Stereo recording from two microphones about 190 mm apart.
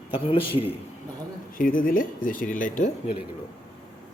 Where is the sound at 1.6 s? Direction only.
45° left (ahead or behind).